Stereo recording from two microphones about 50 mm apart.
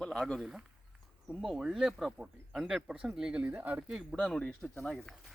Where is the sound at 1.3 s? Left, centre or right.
Centre.